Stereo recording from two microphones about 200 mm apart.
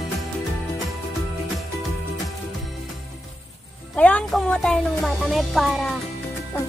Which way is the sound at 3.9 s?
5° left (ahead or behind).